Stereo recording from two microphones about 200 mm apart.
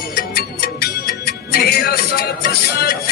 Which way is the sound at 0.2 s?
50° left (ahead or behind).